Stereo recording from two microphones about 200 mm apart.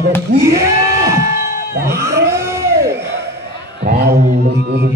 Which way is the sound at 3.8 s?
50° right (ahead or behind).